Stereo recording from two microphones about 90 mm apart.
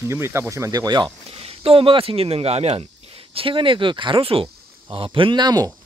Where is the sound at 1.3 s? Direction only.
90° right.